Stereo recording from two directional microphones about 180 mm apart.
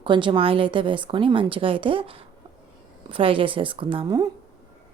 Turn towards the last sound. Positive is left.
turn(degrees=-30)  # may be behind; listen again after turning